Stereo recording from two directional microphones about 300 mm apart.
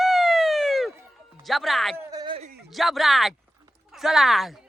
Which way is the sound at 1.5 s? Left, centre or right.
Centre.